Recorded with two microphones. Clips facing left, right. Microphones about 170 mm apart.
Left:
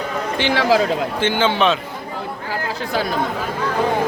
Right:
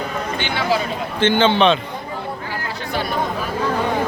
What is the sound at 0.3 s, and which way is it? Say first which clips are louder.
Speech: left 5 dB; 90° left.